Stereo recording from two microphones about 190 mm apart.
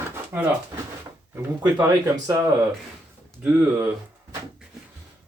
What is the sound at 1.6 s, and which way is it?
Speech, 15° right (ahead or behind).